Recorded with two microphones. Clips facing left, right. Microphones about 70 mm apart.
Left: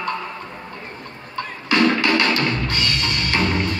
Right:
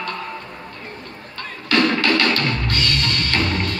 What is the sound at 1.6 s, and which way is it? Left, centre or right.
Music, centre.